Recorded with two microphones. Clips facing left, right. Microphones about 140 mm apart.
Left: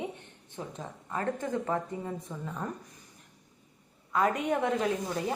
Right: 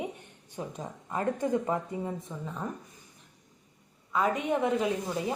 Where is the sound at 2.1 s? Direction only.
Centre (ahead or behind).